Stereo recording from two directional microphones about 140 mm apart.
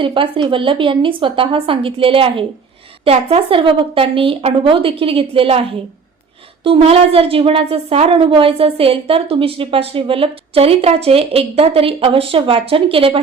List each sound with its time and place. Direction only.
0.0 s speech: 35° right (ahead or behind)
6.7 s a woman's voice: 40° right (ahead or behind)